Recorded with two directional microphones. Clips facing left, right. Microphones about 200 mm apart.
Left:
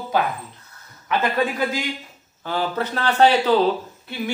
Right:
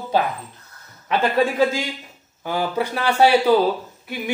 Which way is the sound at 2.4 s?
10° right (ahead or behind).